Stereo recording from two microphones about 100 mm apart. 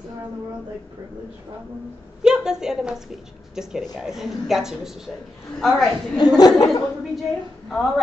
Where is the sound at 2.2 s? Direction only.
5° right (ahead or behind).